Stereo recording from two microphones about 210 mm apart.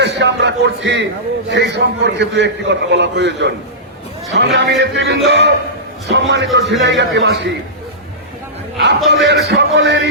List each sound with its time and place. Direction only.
0.0 s a man's voice: 55° right (ahead or behind)
9.0 s a man's voice: 55° right (ahead or behind)